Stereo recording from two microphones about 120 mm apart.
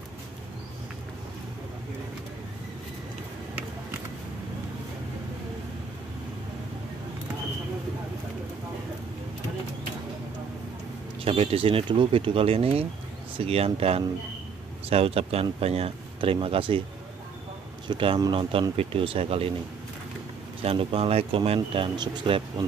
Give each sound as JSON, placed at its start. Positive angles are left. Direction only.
{"t": 11.2, "sound": "speech", "side_deg": -55}
{"t": 17.8, "sound": "speech", "side_deg": -45}
{"t": 20.6, "sound": "speech", "side_deg": -50}
{"t": 21.7, "sound": "speech", "side_deg": -40}